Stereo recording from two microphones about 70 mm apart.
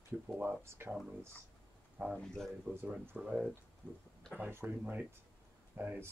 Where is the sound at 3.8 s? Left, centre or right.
Left.